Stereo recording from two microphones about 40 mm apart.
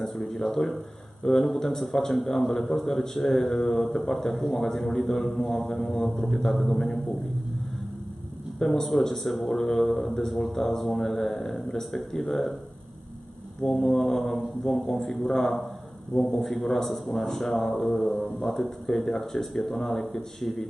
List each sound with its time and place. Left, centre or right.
0.3 s a man's voice: centre
8.5 s speech: centre
9.5 s a man's voice: centre
9.8 s a man's voice: centre
13.7 s a man's voice: centre